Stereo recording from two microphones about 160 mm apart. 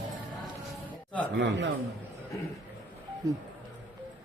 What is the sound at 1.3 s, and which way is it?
Speech, 90° right.